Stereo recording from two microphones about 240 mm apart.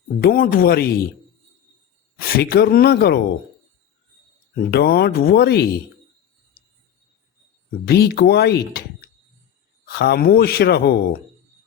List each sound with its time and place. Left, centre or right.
0.2 s speech: left
2.3 s speech: left
4.7 s speech: left
7.9 s speech: left